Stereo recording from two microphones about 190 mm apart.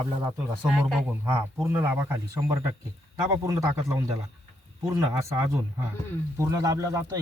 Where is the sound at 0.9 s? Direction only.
Centre (ahead or behind); by 4.1 s 15° right (ahead or behind).